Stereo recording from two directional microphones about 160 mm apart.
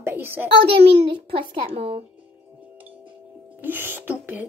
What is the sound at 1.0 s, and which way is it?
Speech, 35° right (ahead or behind).